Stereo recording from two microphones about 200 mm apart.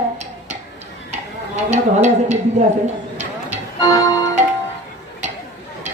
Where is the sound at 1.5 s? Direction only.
35° right (ahead or behind).